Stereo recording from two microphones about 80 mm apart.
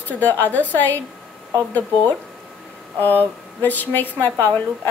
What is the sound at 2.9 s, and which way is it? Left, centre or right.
A woman's voice, left.